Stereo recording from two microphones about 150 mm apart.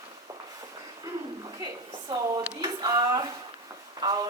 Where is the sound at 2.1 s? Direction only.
30° right (ahead or behind).